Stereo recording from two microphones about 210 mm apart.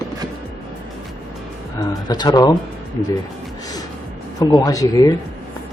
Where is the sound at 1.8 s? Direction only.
20° left (ahead or behind).